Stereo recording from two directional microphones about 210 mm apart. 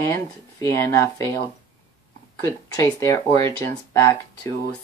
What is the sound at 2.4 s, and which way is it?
Speech, 15° left (ahead or behind).